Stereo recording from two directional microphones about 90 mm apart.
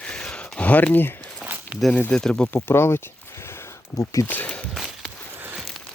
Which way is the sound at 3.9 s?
40° left (ahead or behind).